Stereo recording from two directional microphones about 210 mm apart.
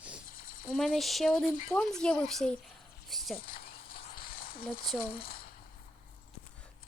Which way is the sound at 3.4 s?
45° left (ahead or behind).